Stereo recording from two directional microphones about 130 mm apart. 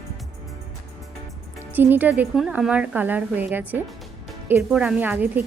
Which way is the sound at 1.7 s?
15° right (ahead or behind).